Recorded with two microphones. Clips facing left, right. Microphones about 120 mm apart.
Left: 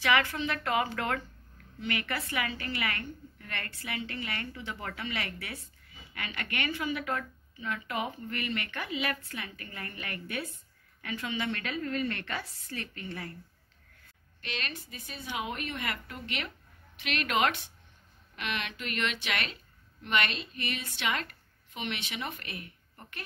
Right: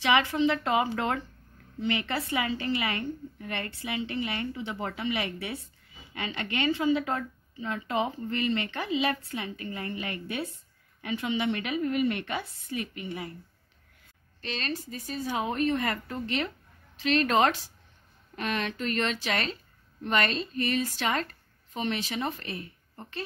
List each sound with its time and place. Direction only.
0.0 s a woman's voice: 25° right (ahead or behind)
14.4 s a woman's voice: 35° right (ahead or behind)